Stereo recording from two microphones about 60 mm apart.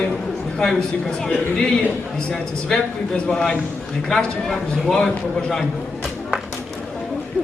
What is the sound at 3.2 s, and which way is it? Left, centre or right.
A man's voice, centre.